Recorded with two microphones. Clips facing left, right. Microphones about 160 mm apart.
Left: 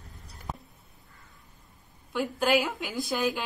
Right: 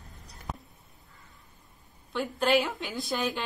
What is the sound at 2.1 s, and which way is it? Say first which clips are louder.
A woman's voice: even; 5° left (ahead or behind).